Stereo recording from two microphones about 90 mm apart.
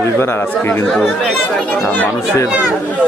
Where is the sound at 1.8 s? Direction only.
20° left (ahead or behind).